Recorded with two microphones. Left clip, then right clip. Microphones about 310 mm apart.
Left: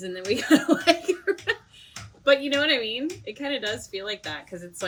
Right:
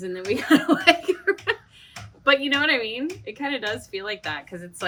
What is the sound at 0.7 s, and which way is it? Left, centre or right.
Giggle, centre.